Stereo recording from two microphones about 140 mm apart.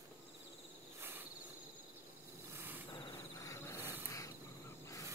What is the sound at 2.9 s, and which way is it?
Insect, 30° left (ahead or behind).